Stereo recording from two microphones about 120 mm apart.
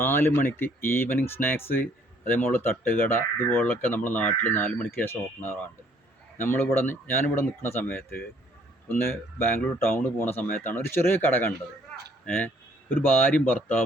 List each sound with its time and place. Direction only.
0.0 s speech: 20° left (ahead or behind)
6.8 s speech: 15° left (ahead or behind)
9.6 s speech: 20° left (ahead or behind)